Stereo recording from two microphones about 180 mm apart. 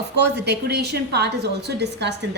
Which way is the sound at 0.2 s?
70° right (ahead or behind).